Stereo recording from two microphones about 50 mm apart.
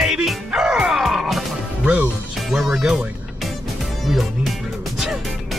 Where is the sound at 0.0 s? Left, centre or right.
Centre.